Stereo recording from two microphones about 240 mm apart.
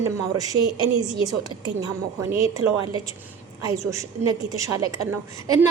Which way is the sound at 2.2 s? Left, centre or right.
Centre.